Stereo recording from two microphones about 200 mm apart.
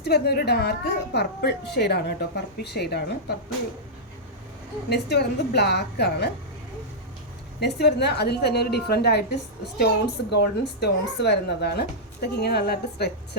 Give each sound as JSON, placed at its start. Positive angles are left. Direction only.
{"t": 0.0, "sound": "a woman's voice", "side_deg": 55}
{"t": 4.9, "sound": "a woman's voice", "side_deg": 55}
{"t": 7.6, "sound": "a woman's voice", "side_deg": 55}